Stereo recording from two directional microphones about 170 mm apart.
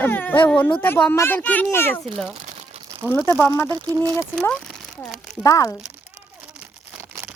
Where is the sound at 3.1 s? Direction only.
15° left (ahead or behind).